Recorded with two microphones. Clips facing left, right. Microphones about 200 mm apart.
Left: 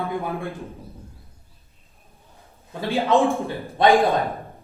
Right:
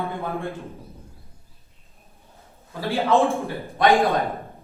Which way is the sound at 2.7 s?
20° left (ahead or behind).